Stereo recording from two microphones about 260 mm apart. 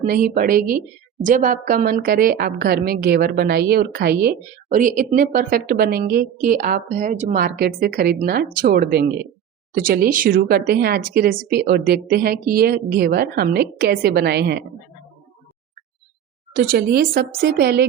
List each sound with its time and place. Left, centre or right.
0.0 s a woman's voice: right
16.6 s a woman's voice: right